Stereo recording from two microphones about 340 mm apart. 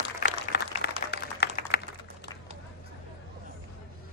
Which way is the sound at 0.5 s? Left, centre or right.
Left.